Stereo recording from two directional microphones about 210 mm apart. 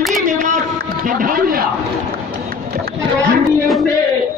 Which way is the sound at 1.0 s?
40° right (ahead or behind).